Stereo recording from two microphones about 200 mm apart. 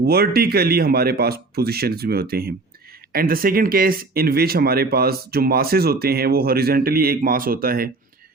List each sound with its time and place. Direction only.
0.0 s speech: 50° right (ahead or behind)